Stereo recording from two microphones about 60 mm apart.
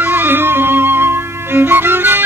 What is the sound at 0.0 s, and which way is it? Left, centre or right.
Music, right.